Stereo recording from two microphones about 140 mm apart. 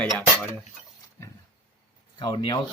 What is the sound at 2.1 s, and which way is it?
Speech, 30° left (ahead or behind).